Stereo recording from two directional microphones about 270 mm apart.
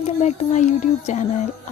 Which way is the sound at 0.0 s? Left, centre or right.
Left.